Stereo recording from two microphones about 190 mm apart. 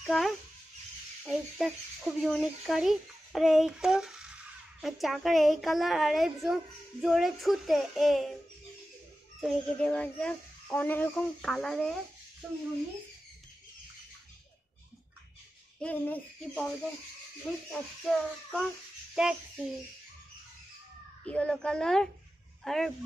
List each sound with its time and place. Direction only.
0.0 s a child's voice: centre (ahead or behind)
9.4 s a child's voice: centre (ahead or behind)
15.8 s a child's voice: 5° left (ahead or behind)
18.0 s a child's voice: centre (ahead or behind)
21.3 s a child's voice: 5° left (ahead or behind)